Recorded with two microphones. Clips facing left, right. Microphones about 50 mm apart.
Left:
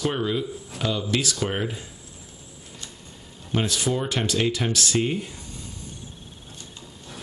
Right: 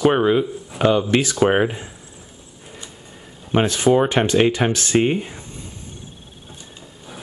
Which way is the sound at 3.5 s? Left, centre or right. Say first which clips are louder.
Right 9 dB; right.